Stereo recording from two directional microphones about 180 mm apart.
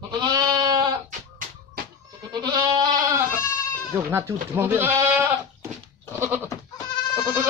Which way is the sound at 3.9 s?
15° right (ahead or behind).